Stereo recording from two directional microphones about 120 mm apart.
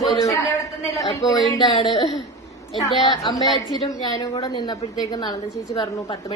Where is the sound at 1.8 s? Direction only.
40° left (ahead or behind).